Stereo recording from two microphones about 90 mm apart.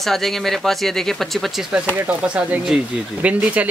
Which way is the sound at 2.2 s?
15° right (ahead or behind).